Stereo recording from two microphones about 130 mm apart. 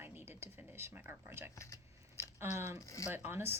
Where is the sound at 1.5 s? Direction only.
25° left (ahead or behind).